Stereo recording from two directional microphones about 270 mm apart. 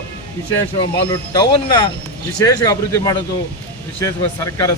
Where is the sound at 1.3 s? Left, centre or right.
Centre.